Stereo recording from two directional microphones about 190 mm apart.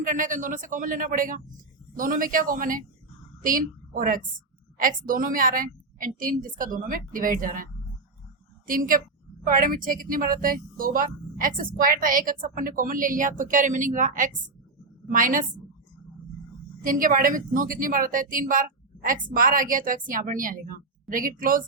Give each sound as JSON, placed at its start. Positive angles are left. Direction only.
{"t": 0.0, "sound": "a woman's voice", "side_deg": -45}
{"t": 16.8, "sound": "speech", "side_deg": -45}